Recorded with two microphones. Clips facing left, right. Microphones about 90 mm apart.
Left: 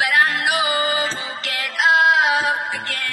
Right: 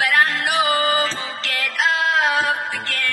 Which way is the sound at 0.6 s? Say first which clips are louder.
Right 2 dB; 40° right (ahead or behind).